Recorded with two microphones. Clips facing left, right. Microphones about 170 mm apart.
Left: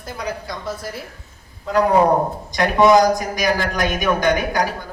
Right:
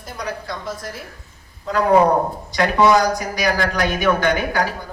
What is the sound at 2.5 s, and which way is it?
A man's voice, 20° left (ahead or behind).